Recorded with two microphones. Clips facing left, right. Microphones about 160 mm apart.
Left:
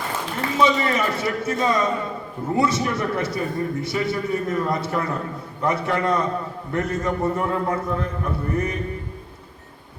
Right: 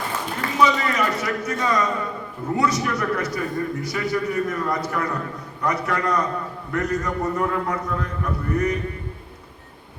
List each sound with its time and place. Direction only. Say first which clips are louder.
0.6 s a man's voice: even; 25° left (ahead or behind)